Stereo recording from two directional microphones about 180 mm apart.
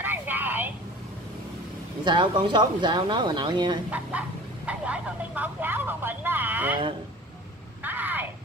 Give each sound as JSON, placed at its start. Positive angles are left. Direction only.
{"t": 0.0, "sound": "vehicle", "side_deg": -10}
{"t": 2.0, "sound": "speech", "side_deg": -25}
{"t": 4.1, "sound": "speech", "side_deg": -10}
{"t": 7.8, "sound": "a sound", "side_deg": -10}